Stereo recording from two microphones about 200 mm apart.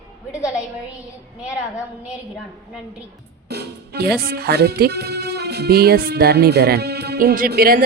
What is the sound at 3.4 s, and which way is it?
Speech, 55° right (ahead or behind).